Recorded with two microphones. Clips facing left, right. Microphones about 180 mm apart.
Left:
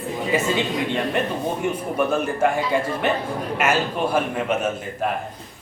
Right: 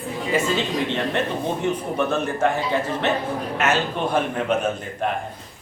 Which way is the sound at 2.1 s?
10° left (ahead or behind).